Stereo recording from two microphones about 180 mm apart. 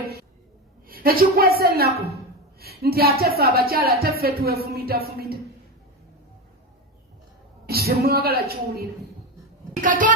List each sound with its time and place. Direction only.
0.9 s a woman's voice: 55° right (ahead or behind)
7.7 s a woman's voice: 60° right (ahead or behind)
9.8 s a child's voice: 45° right (ahead or behind)